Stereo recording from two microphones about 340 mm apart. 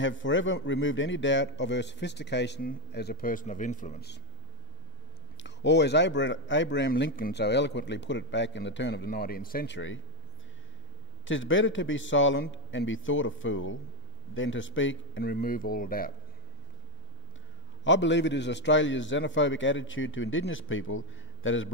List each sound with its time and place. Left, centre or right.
0.0 s speech: left
5.4 s speech: left
11.2 s speech: left
17.8 s speech: left